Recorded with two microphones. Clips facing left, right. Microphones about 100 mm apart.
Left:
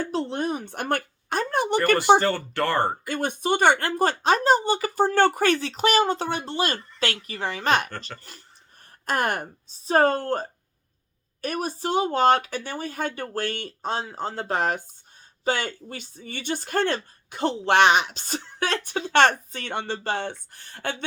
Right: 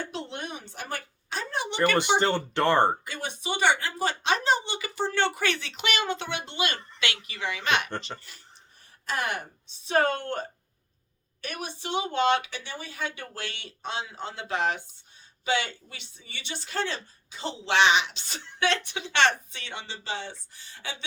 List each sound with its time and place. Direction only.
0.0 s a sound: 40° left (ahead or behind)
0.6 s speech: 55° left (ahead or behind)
2.1 s speech: 20° right (ahead or behind)
3.1 s speech: 50° left (ahead or behind)
7.9 s speech: 20° right (ahead or behind)
9.0 s a woman's voice: 50° left (ahead or behind)